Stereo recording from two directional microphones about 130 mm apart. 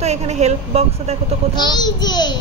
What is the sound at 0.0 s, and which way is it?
A woman's voice, 60° right (ahead or behind).